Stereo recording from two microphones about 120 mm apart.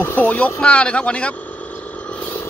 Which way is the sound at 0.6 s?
10° left (ahead or behind).